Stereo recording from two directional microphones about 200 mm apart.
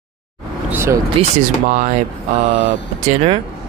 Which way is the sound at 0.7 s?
15° right (ahead or behind).